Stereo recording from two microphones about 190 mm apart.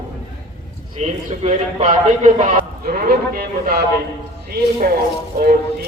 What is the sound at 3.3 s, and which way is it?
Speech, 55° right (ahead or behind).